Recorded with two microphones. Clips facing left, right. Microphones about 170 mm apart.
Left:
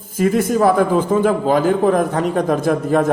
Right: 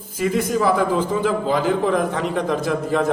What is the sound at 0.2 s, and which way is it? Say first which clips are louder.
A man's voice: left 5 dB; 50° left (ahead or behind).